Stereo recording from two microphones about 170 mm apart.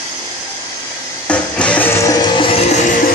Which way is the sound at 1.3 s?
5° left (ahead or behind).